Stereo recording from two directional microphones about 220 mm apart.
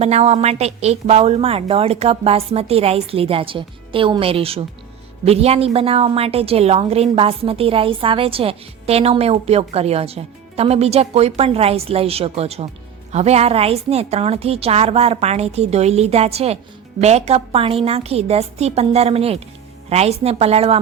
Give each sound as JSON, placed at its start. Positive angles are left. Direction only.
{"t": 0.0, "sound": "a woman's voice", "side_deg": -30}